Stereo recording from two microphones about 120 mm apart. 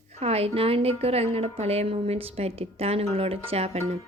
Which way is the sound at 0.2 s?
55° right (ahead or behind).